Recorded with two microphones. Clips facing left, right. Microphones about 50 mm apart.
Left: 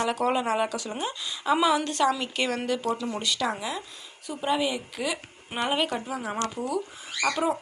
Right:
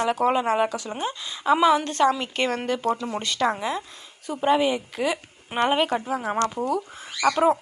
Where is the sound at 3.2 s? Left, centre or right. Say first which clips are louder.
Right 4 dB; right.